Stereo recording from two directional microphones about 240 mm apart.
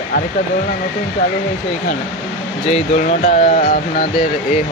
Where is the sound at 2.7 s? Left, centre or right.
Left.